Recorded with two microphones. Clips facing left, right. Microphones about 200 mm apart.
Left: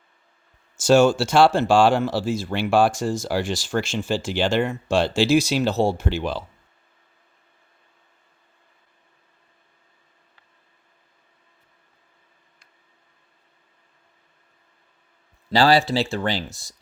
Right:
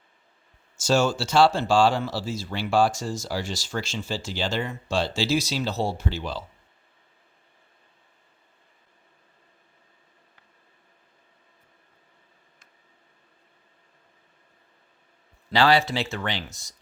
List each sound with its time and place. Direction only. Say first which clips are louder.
0.9 s speech: left 7 dB; 55° left (ahead or behind)
15.5 s speech: left 3 dB; 35° left (ahead or behind)